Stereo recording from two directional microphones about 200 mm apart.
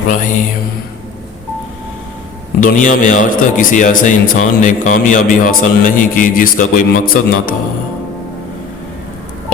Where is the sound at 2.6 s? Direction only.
40° left (ahead or behind).